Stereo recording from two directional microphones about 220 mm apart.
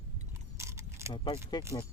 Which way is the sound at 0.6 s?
10° right (ahead or behind).